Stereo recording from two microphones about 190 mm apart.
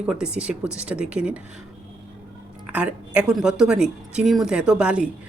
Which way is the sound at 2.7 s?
5° right (ahead or behind).